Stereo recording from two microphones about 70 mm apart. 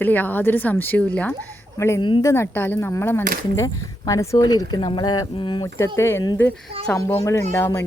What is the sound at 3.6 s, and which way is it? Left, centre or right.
Speech, left.